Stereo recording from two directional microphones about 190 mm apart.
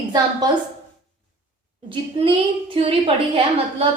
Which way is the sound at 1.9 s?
25° right (ahead or behind).